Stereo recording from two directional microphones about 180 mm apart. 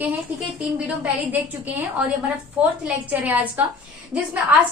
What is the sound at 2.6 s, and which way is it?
Speech, 10° right (ahead or behind).